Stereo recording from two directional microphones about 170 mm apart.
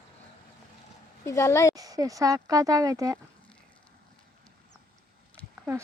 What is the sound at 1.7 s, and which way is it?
Speech, 20° right (ahead or behind).